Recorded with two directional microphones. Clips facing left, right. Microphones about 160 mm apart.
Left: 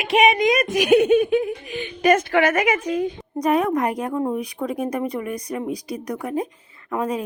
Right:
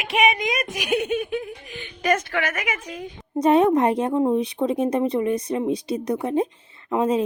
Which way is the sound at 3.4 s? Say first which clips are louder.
Right 3 dB; 25° right (ahead or behind).